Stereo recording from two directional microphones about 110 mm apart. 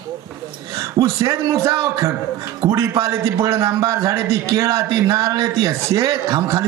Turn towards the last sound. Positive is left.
turn(degrees=-30)  # may be behind; listen again after turning